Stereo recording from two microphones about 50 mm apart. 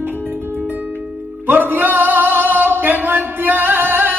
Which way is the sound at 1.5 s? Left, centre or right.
Right.